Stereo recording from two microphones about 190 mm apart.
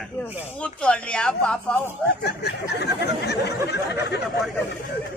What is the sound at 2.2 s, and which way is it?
Speech, 60° left (ahead or behind).